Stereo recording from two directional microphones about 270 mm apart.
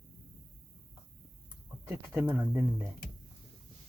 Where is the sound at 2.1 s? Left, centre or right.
Centre.